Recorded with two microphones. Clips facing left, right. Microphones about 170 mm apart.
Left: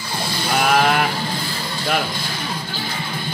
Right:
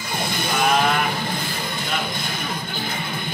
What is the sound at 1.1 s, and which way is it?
Music, 20° right (ahead or behind).